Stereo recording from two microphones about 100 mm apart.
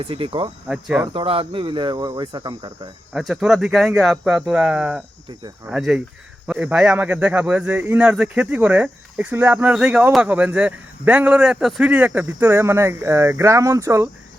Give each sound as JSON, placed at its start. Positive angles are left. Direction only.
{"t": 0.0, "sound": "speech", "side_deg": -65}
{"t": 0.7, "sound": "speech", "side_deg": -5}
{"t": 1.1, "sound": "speech", "side_deg": -60}
{"t": 3.2, "sound": "a man's voice", "side_deg": -5}